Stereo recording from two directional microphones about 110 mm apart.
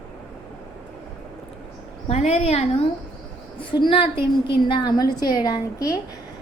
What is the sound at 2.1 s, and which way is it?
Speech, 75° left (ahead or behind).